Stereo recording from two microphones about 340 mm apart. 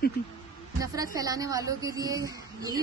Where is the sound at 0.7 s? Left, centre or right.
Centre.